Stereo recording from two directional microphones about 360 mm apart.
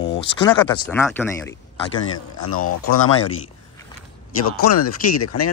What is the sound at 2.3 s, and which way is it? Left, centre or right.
Speech, left.